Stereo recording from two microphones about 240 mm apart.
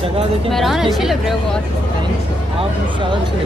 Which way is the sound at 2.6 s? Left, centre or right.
Centre.